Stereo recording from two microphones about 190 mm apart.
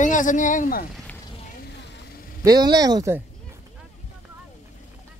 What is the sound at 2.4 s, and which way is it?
Speech, 20° right (ahead or behind).